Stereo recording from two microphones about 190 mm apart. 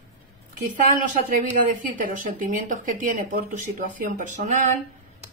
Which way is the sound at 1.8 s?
45° right (ahead or behind).